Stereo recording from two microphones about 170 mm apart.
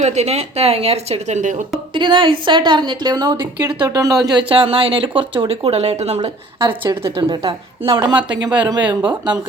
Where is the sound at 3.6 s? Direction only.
5° right (ahead or behind).